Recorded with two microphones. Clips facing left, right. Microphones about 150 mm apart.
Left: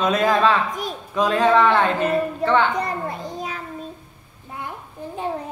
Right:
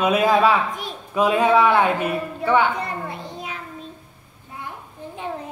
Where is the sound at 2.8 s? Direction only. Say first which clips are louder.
Left 3 dB; 40° left (ahead or behind).